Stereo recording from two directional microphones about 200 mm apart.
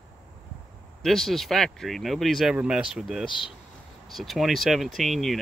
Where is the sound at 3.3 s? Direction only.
25° left (ahead or behind).